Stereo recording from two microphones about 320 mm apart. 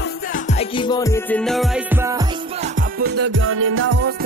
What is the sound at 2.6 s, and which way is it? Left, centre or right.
Music, right.